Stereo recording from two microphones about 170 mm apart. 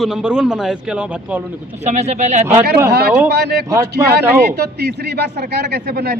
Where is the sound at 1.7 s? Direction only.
40° right (ahead or behind).